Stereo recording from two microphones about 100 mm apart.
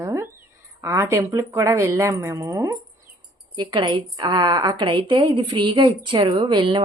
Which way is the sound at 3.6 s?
50° right (ahead or behind).